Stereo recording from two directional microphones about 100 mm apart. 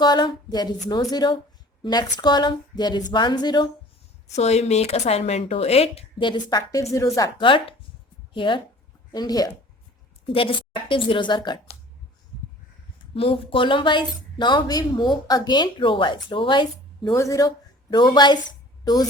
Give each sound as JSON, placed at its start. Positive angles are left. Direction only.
{"t": 0.0, "sound": "speech", "side_deg": 45}
{"t": 4.4, "sound": "speech", "side_deg": 90}
{"t": 6.2, "sound": "a woman's voice", "side_deg": 45}
{"t": 7.3, "sound": "a woman's voice", "side_deg": 55}
{"t": 9.1, "sound": "a woman's voice", "side_deg": 40}
{"t": 10.3, "sound": "a woman's voice", "side_deg": 60}
{"t": 13.1, "sound": "speech", "side_deg": 65}
{"t": 17.2, "sound": "a woman's voice", "side_deg": 35}
{"t": 17.9, "sound": "speech", "side_deg": 45}